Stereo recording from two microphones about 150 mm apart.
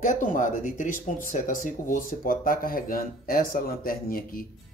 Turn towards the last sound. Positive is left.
turn(degrees=70)  # may be behind; listen again after turning